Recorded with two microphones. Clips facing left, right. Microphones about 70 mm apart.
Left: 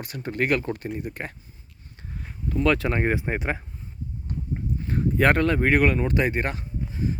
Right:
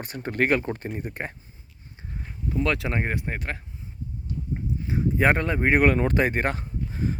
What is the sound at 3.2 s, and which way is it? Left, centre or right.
Speech, centre.